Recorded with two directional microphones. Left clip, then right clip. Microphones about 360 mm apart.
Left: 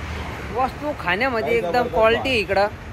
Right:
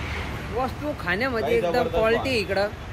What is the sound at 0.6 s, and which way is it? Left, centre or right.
Speech, centre.